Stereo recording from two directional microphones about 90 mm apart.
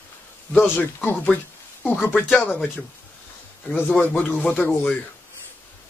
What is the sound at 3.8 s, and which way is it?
Speech, 20° left (ahead or behind).